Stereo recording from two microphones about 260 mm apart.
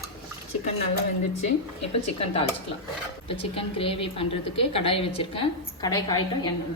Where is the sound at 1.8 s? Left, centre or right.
Left.